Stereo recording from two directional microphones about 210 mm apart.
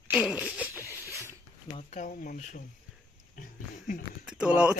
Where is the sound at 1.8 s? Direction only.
35° left (ahead or behind).